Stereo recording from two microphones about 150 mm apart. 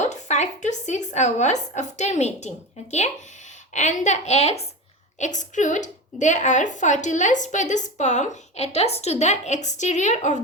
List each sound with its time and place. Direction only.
0.0 s a woman's voice: 50° left (ahead or behind)
3.8 s a woman's voice: 50° left (ahead or behind)